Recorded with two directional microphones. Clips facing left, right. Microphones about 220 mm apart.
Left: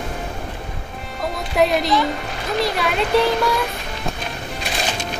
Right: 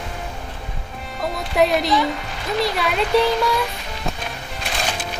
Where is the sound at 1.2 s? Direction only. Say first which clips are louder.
Even; centre (ahead or behind).